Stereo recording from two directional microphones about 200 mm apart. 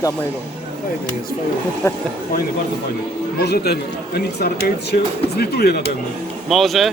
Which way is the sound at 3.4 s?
55° left (ahead or behind).